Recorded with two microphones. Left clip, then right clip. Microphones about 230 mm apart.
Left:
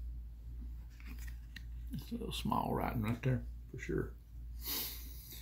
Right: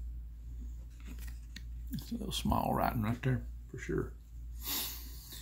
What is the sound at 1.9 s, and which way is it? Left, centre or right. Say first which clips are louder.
Speech: right 3 dB; right.